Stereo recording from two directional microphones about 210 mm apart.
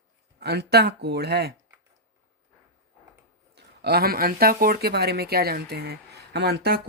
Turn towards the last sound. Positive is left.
turn(degrees=-50)  # may be behind; listen again after turning